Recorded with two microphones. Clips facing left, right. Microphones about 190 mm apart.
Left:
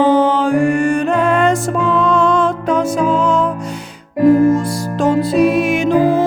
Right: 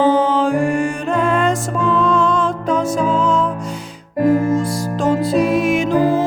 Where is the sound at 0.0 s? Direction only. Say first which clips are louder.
Left 2 dB; 65° left (ahead or behind).